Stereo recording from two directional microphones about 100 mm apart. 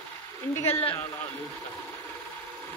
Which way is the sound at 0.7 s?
20° left (ahead or behind).